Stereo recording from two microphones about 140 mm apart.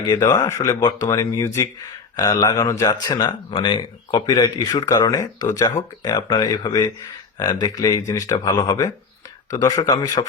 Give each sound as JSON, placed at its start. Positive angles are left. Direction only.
{"t": 0.0, "sound": "speech", "side_deg": 25}